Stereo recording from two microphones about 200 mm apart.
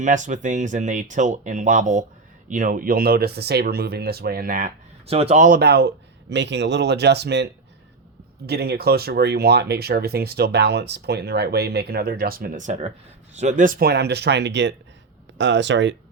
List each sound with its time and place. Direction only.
0.0 s speech: 40° right (ahead or behind)
5.0 s speech: 30° right (ahead or behind)
5.5 s speech: 55° right (ahead or behind)
8.4 s speech: 55° right (ahead or behind)